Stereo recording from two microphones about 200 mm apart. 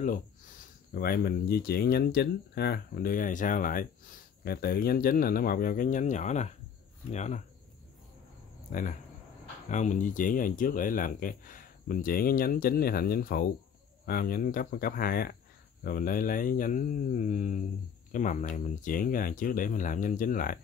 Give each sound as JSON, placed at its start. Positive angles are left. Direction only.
{"t": 0.0, "sound": "speech", "side_deg": 45}
{"t": 9.7, "sound": "speech", "side_deg": 40}